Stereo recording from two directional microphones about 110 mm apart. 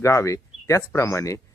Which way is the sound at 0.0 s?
25° left (ahead or behind).